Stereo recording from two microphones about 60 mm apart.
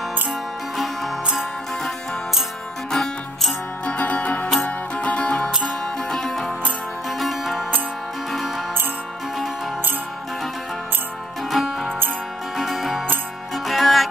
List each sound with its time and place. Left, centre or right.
2.9 s music: centre
3.8 s music: left
6.0 s music: centre
11.5 s music: centre